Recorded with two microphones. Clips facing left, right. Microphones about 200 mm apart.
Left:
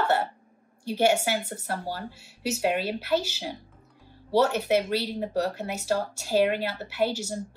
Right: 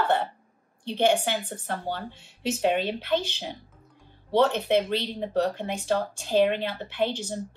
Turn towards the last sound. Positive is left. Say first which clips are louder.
# left 1 dB
turn(degrees=10)  # may be behind; listen again after turning